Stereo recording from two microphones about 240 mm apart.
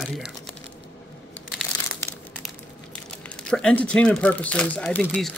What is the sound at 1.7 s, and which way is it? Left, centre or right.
Crumpling, centre.